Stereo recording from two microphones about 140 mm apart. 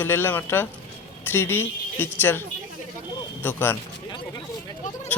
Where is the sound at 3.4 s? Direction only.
15° left (ahead or behind).